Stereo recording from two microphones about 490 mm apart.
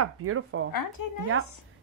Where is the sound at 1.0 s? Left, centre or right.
Left.